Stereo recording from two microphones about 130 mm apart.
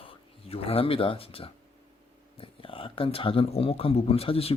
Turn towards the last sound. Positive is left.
turn(degrees=50)  # may be behind; listen again after turning